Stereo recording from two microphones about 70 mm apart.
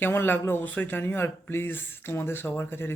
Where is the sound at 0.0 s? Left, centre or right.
Left.